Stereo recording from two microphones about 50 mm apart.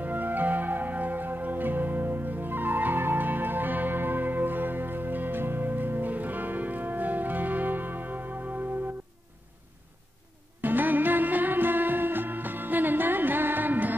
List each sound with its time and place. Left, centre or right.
0.0 s music: right
10.6 s music: right